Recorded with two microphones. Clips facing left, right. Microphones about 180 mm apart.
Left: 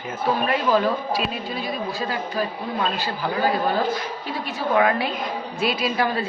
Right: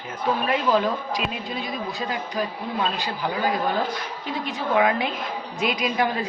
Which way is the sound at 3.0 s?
15° right (ahead or behind).